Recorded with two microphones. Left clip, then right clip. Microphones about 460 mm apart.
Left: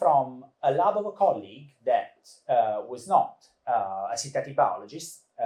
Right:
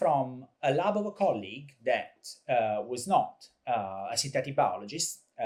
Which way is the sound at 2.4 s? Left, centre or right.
Right.